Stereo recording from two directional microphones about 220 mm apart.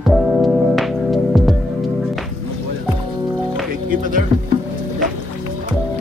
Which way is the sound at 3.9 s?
40° right (ahead or behind).